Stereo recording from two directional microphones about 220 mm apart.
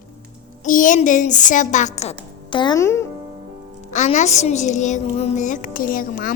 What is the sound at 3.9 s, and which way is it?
Music, 30° left (ahead or behind).